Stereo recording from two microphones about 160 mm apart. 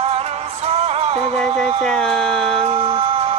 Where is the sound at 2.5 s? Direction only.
40° right (ahead or behind).